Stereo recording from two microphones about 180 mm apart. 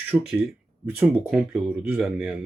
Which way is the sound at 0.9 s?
5° right (ahead or behind).